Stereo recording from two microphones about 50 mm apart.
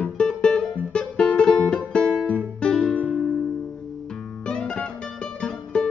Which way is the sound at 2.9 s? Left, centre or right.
Left.